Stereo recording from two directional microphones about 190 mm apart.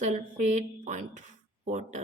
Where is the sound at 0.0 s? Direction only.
40° right (ahead or behind).